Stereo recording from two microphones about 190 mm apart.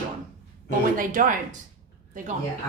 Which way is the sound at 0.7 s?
45° right (ahead or behind).